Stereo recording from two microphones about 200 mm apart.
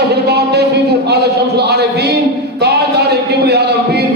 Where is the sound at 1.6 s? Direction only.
55° right (ahead or behind).